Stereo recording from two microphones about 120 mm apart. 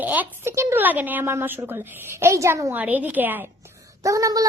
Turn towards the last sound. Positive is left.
turn(degrees=-30)  # may be behind; listen again after turning